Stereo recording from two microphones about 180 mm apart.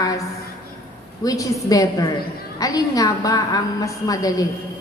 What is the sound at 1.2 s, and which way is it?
A woman's voice, 20° left (ahead or behind).